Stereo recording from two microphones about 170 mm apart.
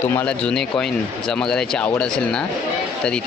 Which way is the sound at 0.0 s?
10° left (ahead or behind).